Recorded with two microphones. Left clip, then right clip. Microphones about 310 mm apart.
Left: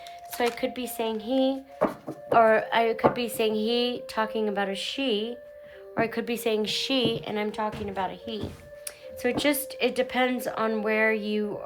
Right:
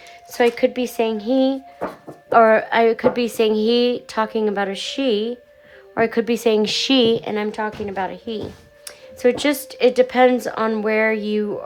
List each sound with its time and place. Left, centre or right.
0.3 s speech: right